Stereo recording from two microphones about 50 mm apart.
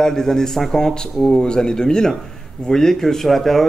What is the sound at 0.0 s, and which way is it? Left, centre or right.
A man's voice, centre.